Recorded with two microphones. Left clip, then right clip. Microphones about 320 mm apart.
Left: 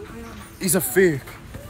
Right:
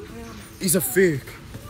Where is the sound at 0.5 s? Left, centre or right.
Centre.